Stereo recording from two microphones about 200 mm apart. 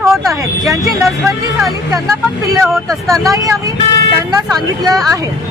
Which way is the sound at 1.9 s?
15° right (ahead or behind).